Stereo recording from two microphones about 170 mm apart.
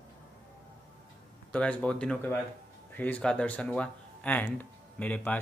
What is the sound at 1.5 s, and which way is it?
Speech, 5° left (ahead or behind).